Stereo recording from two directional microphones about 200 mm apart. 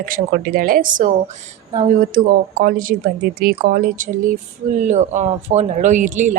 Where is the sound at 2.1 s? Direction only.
45° right (ahead or behind).